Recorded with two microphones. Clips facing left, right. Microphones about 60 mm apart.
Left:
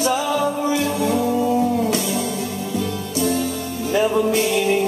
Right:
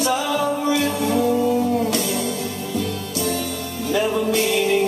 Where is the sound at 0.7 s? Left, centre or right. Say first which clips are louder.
Even; left.